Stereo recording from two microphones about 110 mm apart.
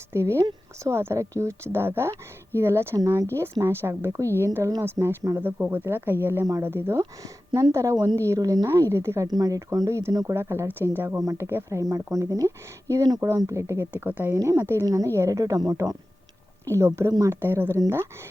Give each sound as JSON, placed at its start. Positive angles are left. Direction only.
{"t": 0.1, "sound": "speech", "side_deg": -25}
{"t": 7.0, "sound": "speech", "side_deg": -35}
{"t": 9.2, "sound": "speech", "side_deg": -35}
{"t": 13.9, "sound": "a woman's voice", "side_deg": -15}
{"t": 17.4, "sound": "speech", "side_deg": -20}